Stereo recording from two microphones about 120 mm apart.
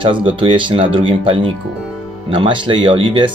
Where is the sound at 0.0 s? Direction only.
45° right (ahead or behind).